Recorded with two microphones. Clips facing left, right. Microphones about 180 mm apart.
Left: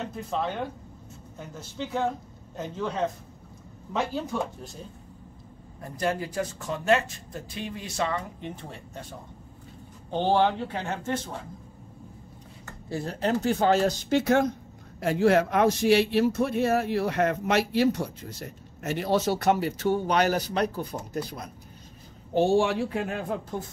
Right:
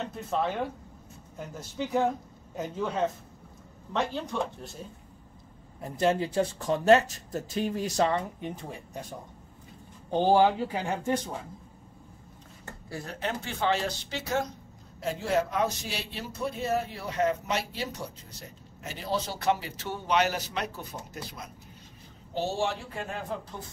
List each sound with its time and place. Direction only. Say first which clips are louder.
0.0 s speech: even; centre (ahead or behind)
2.5 s speech: even; 10° right (ahead or behind)
5.8 s speech: right 3 dB; 20° right (ahead or behind); by 8.2 s 40° right (ahead or behind)
8.4 s speech: right 1 dB; 10° right (ahead or behind)
10.1 s speech: right 1 dB; 10° right (ahead or behind)
12.9 s speech: left 7 dB; 30° left (ahead or behind); by 19.2 s 60° left (ahead or behind)
19.4 s speech: left 5 dB; 45° left (ahead or behind)